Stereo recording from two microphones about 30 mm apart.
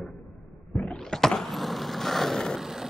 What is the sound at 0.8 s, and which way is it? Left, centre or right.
Power windows, centre.